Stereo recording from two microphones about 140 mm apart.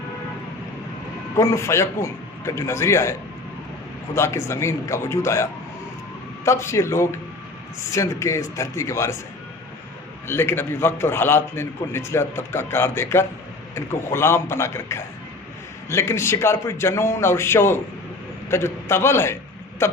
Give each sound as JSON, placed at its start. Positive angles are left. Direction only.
{"t": 1.4, "sound": "a man's voice", "side_deg": 20}
{"t": 10.2, "sound": "a man's voice", "side_deg": 15}